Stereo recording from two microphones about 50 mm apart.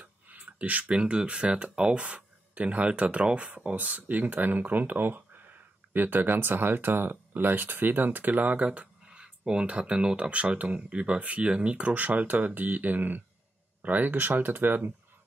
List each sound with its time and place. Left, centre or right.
0.0 s speech: right
3.8 s speech: right